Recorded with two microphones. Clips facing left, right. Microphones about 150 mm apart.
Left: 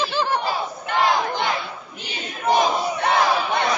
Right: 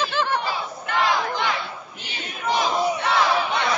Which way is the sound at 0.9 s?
40° left (ahead or behind).